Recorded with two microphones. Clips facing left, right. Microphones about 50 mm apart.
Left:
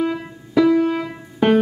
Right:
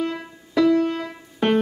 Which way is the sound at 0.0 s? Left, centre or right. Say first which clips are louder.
Left 4 dB; centre.